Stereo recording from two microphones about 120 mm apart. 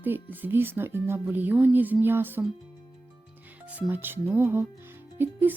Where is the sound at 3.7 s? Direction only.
15° right (ahead or behind).